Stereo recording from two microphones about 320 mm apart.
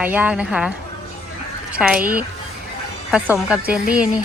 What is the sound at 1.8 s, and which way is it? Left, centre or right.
A woman's voice, centre.